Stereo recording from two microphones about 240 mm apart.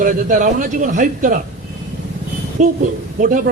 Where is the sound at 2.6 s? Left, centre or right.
Right.